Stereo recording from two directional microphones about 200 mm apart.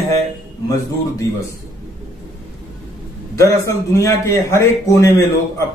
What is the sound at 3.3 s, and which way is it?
A man's voice, 15° left (ahead or behind).